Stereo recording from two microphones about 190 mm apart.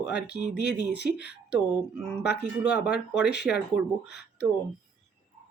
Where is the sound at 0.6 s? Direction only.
60° left (ahead or behind).